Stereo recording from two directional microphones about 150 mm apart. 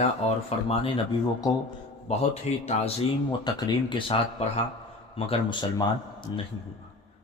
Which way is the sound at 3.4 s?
30° left (ahead or behind).